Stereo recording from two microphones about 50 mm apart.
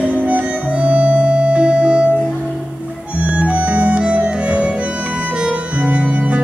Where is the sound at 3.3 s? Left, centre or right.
Right.